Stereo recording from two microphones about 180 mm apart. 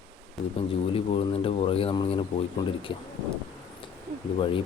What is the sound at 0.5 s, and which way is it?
Speech, 30° left (ahead or behind).